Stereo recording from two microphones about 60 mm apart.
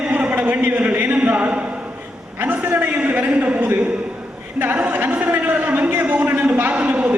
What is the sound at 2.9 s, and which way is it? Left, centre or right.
Speech, right.